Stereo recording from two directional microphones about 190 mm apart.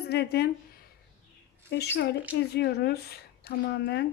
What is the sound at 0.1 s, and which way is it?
Speech, 60° left (ahead or behind).